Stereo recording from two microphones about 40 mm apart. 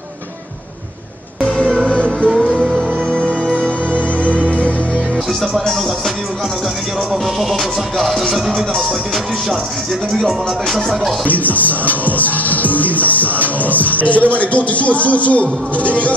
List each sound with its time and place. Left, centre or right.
1.9 s music: left
2.3 s music: centre
3.1 s music: right
5.7 s music: centre
7.3 s music: centre
10.1 s music: centre
11.2 s music: left
13.6 s speech: left